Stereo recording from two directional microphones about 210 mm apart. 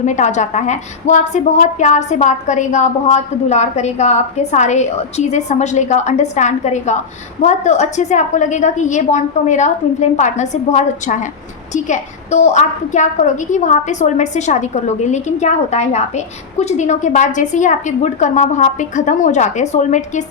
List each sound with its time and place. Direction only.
0.0 s a woman's voice: 35° left (ahead or behind)